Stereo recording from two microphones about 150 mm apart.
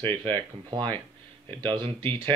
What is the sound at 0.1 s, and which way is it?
Speech, 35° right (ahead or behind).